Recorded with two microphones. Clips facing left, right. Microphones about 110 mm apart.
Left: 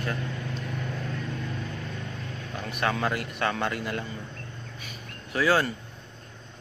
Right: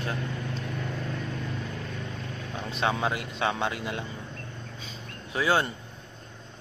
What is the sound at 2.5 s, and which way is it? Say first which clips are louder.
Speech: even; 25° right (ahead or behind).